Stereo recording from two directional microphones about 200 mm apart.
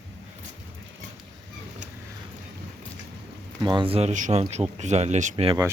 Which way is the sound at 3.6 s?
25° right (ahead or behind).